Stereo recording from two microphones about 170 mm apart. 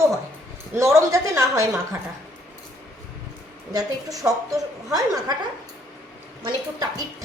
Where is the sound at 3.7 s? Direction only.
20° right (ahead or behind).